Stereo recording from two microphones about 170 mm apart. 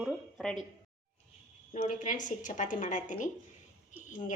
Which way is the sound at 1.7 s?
50° left (ahead or behind).